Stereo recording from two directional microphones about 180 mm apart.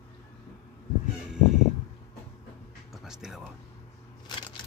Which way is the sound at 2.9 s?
5° right (ahead or behind).